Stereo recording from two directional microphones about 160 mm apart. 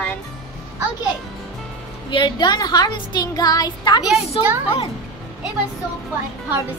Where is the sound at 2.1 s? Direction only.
30° left (ahead or behind).